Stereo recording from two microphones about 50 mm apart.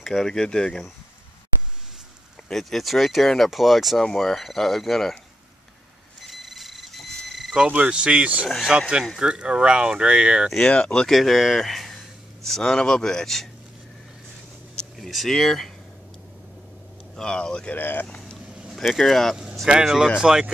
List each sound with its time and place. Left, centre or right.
0.0 s speech: centre
2.5 s speech: centre
4.0 s speech: centre
6.2 s a sound: centre
7.7 s speech: right
10.7 s speech: centre
11.1 s speech: centre
15.0 s speech: centre
17.1 s speech: centre
17.7 s speech: left
18.4 s a sound: centre
18.9 s speech: centre
19.8 s speech: centre